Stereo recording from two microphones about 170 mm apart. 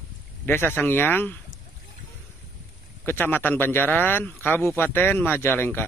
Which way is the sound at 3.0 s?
10° left (ahead or behind).